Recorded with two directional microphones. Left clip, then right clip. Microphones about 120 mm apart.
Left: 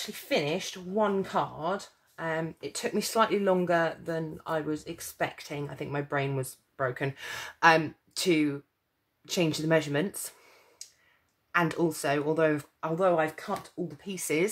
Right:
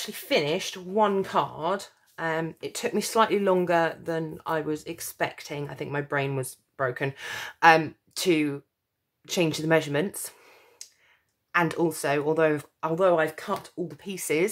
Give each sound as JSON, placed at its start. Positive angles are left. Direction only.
{"t": 0.0, "sound": "speech", "side_deg": -45}
{"t": 11.5, "sound": "speech", "side_deg": -30}